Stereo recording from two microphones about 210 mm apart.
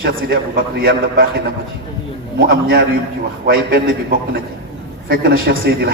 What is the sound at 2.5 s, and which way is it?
A man's voice, 45° right (ahead or behind).